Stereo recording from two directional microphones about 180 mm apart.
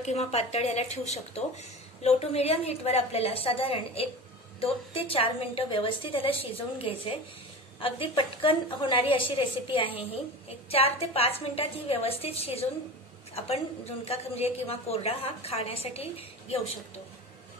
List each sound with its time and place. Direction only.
0.0 s a woman's voice: 35° left (ahead or behind)
8.2 s a woman's voice: 30° left (ahead or behind)